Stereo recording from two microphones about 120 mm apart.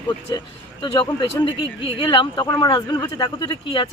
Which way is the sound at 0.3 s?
40° left (ahead or behind).